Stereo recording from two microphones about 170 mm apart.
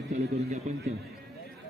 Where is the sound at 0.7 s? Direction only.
45° right (ahead or behind).